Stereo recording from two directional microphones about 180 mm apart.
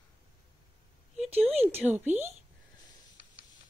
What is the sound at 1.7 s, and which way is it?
Speech, 10° right (ahead or behind).